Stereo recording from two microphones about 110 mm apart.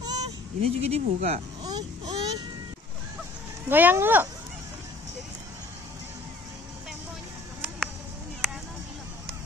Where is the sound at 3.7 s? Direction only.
20° right (ahead or behind).